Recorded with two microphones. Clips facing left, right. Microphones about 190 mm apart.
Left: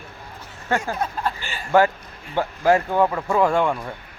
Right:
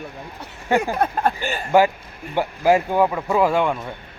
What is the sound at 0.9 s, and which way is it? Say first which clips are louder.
Speech: right 5 dB; 55° right (ahead or behind).